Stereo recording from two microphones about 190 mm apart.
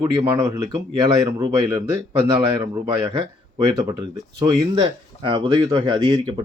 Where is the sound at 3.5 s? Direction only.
20° right (ahead or behind).